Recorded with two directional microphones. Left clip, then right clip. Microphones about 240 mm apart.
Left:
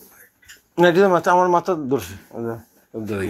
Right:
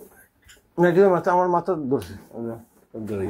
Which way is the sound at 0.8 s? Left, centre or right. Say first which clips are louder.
Left 3 dB; centre.